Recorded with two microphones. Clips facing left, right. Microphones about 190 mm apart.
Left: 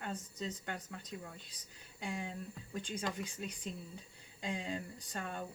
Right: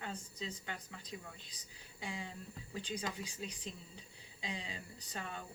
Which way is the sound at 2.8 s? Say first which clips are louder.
Left 2 dB; 50° left (ahead or behind).